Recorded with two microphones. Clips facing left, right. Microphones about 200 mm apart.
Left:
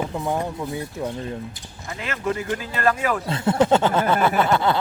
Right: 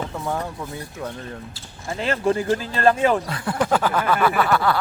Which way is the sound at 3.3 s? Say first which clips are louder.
Left 4 dB; 25° left (ahead or behind).